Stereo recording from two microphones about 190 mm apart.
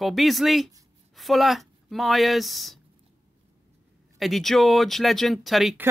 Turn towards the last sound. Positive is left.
turn(degrees=0)  # may be behind; listen again after turning